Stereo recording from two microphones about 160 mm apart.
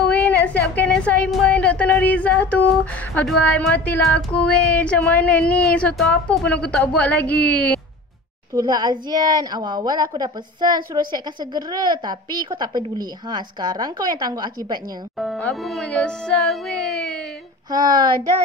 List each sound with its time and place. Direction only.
0.1 s a woman's voice: 10° left (ahead or behind)
8.5 s a woman's voice: 25° right (ahead or behind)
15.1 s speech: centre (ahead or behind)
17.6 s a woman's voice: 25° right (ahead or behind)